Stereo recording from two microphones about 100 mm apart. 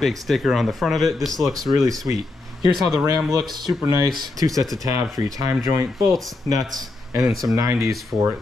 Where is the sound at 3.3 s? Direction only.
40° right (ahead or behind).